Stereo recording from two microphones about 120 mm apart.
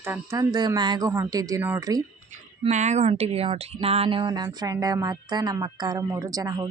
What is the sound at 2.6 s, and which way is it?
Speech, 75° right (ahead or behind).